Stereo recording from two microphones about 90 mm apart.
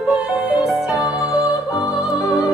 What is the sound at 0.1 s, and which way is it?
Music, 15° right (ahead or behind).